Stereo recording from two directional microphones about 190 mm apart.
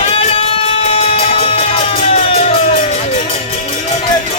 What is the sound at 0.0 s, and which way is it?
Music, 30° left (ahead or behind).